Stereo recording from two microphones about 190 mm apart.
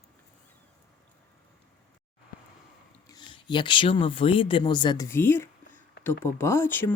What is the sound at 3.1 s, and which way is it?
Speech, 25° left (ahead or behind).